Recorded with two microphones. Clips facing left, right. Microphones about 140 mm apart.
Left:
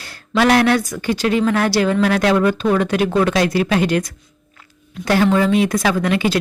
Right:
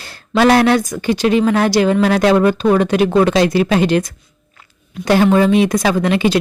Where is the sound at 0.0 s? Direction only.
25° right (ahead or behind).